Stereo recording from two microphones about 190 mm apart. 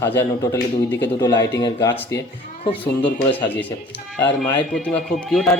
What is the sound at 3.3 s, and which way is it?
Speech, 10° left (ahead or behind).